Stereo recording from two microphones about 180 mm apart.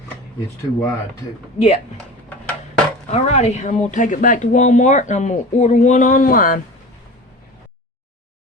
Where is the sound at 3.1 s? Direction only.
40° left (ahead or behind).